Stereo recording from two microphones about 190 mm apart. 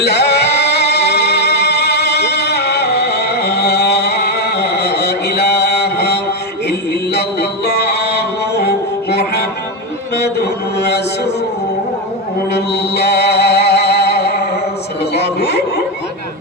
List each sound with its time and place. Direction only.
0.0 s music: 60° left (ahead or behind)
10.2 s mantra: 60° left (ahead or behind)
12.5 s music: 60° left (ahead or behind)
15.4 s a sound: 60° left (ahead or behind)